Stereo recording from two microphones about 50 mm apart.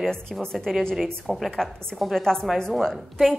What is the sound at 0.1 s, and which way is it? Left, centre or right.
Speech, centre.